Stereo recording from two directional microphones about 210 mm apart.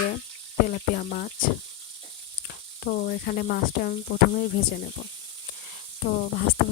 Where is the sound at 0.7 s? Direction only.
45° left (ahead or behind).